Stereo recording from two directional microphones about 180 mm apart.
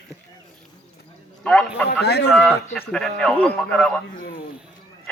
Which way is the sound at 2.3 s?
Centre (ahead or behind).